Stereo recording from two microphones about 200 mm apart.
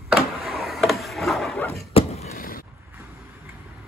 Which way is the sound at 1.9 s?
30° left (ahead or behind).